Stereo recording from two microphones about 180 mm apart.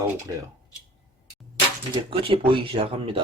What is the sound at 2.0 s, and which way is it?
A man's voice, 30° right (ahead or behind).